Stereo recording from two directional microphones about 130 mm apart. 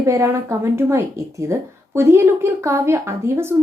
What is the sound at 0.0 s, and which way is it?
A woman's voice, 25° right (ahead or behind).